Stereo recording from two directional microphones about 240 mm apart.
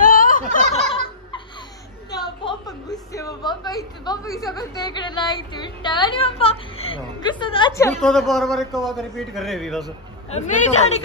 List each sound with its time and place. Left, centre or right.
0.0 s turkey: left
0.7 s turkey: left
2.0 s a sound: centre
4.6 s a woman's voice: centre
8.0 s a man's voice: centre
10.3 s a woman's voice: left